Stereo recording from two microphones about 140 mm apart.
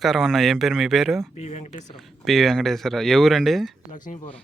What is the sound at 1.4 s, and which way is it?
Speech, 55° left (ahead or behind).